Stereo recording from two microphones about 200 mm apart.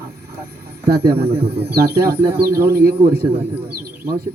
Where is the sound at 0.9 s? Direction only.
50° right (ahead or behind).